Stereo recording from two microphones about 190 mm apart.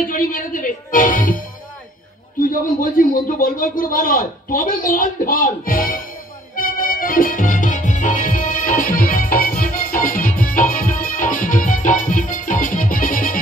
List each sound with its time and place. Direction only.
0.0 s speech: 45° left (ahead or behind)
2.4 s a man's voice: 45° left (ahead or behind)
6.5 s music: 50° left (ahead or behind)